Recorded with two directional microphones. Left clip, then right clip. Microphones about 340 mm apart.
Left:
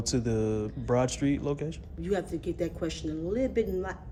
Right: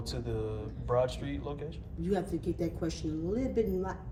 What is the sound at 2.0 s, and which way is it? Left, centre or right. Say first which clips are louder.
A man's voice: left 2 dB; centre.